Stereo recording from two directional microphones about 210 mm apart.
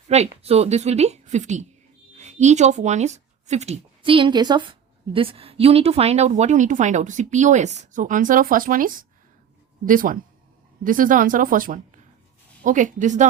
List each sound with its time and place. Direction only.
0.1 s a woman's voice: 30° right (ahead or behind)